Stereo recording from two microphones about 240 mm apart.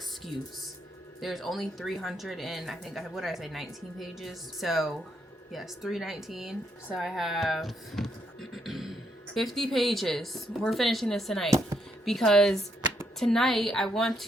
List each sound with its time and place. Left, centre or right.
1.2 s speech: centre